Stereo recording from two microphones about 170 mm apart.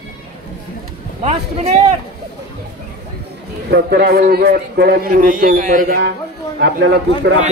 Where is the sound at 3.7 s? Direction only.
70° right (ahead or behind).